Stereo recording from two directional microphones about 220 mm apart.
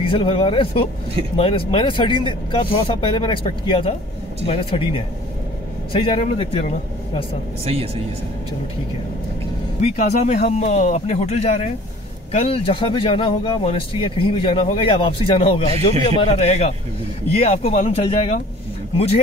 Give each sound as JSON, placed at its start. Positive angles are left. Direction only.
{"t": 0.0, "sound": "speech", "side_deg": 25}
{"t": 7.6, "sound": "speech", "side_deg": -25}
{"t": 9.8, "sound": "speech", "side_deg": 35}